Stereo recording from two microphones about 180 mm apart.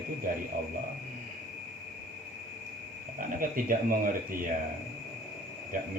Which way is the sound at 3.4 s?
50° right (ahead or behind).